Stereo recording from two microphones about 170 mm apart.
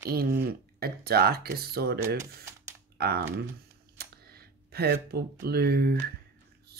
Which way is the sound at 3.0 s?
70° right (ahead or behind).